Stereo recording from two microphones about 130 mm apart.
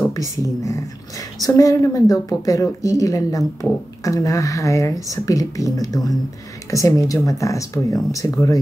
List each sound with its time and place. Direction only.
0.0 s a woman's voice: 25° left (ahead or behind)